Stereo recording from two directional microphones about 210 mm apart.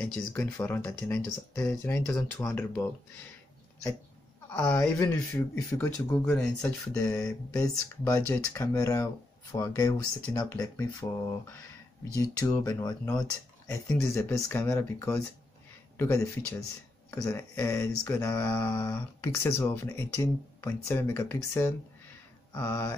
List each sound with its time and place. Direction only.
0.0 s mantra: 10° left (ahead or behind)
4.5 s mantra: 10° left (ahead or behind)
12.2 s mantra: 15° left (ahead or behind)
22.5 s speech: 10° left (ahead or behind)